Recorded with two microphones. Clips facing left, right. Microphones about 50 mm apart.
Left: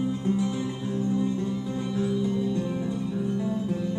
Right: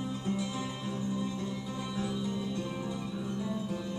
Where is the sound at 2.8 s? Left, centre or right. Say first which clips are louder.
Left 7 dB; centre.